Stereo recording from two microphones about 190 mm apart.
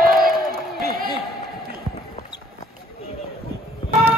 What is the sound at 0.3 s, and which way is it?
Crowd, centre (ahead or behind).